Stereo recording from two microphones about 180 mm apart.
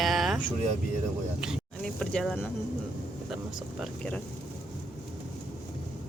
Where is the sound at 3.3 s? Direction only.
Centre (ahead or behind).